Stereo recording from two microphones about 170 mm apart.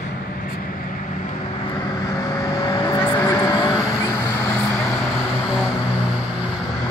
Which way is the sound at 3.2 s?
20° left (ahead or behind).